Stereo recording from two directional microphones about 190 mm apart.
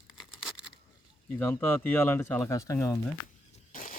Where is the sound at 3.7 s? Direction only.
45° left (ahead or behind).